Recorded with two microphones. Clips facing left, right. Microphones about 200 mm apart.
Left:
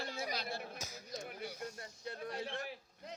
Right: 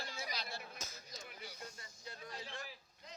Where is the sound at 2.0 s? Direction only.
55° left (ahead or behind).